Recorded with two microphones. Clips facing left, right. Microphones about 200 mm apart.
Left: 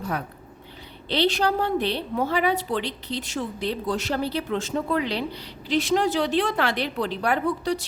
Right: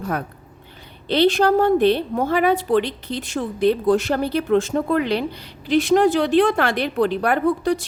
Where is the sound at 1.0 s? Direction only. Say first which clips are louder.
Right 6 dB; 50° right (ahead or behind).